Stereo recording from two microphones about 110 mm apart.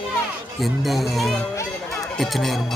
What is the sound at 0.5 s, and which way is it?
Speech, centre (ahead or behind).